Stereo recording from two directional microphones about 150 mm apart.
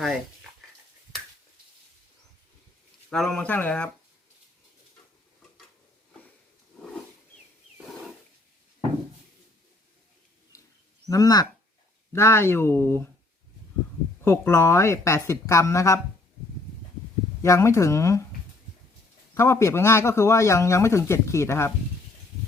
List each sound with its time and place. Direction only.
3.1 s speech: 5° left (ahead or behind)
10.5 s a sound: 20° left (ahead or behind)
11.1 s a man's voice: 25° left (ahead or behind)
14.3 s a man's voice: 15° left (ahead or behind)
17.4 s a man's voice: 20° left (ahead or behind)
19.3 s a man's voice: 15° left (ahead or behind)